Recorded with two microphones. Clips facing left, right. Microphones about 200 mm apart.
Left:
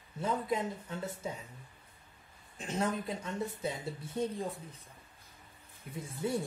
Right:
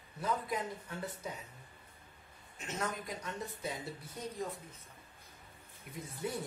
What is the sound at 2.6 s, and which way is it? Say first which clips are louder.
Speech: left 5 dB; 30° left (ahead or behind).